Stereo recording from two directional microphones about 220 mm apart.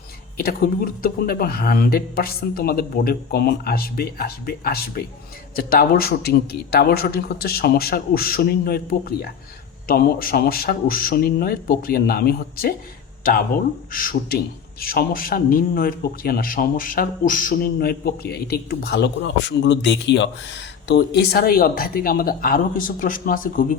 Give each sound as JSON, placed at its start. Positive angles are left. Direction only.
{"t": 0.3, "sound": "a man's voice", "side_deg": 40}